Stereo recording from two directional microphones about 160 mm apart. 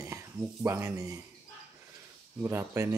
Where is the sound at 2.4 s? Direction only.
15° right (ahead or behind).